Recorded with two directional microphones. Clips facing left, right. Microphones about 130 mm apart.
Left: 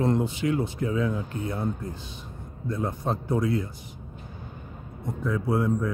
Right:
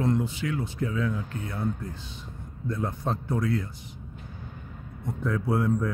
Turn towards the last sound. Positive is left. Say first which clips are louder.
# left 1 dB
turn(degrees=0)  # may be behind; listen again after turning